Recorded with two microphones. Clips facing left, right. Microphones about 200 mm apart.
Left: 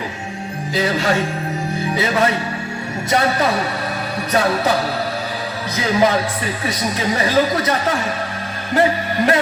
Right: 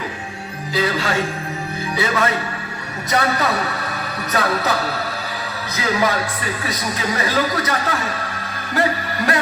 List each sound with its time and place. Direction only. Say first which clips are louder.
0.7 s speech: left 2 dB; 30° left (ahead or behind)
6.7 s speech: left 4 dB; 30° left (ahead or behind)
8.7 s music: left 4 dB; 25° left (ahead or behind)